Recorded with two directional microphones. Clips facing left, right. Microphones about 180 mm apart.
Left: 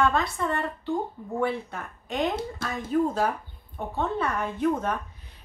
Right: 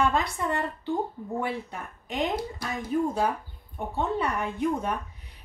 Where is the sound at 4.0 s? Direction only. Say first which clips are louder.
Even; 15° right (ahead or behind).